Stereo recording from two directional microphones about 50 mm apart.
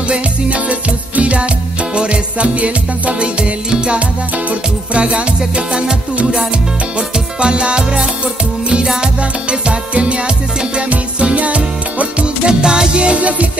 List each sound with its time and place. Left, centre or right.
0.1 s music: right